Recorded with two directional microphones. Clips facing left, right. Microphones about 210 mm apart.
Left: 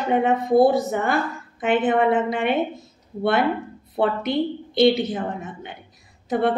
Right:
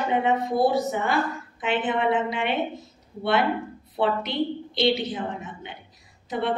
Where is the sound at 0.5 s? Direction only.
50° left (ahead or behind).